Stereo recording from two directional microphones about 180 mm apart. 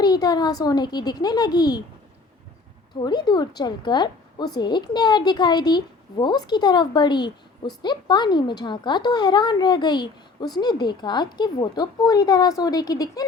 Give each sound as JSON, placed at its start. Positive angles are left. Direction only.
{"t": 0.0, "sound": "a woman's voice", "side_deg": 20}
{"t": 2.9, "sound": "a woman's voice", "side_deg": 25}